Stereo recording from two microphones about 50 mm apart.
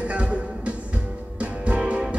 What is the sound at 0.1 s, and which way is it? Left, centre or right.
Music, right.